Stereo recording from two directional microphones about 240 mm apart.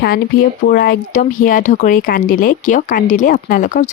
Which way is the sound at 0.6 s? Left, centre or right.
Left.